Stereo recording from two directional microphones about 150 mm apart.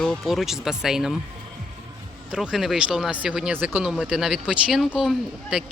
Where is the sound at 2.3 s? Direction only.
5° right (ahead or behind).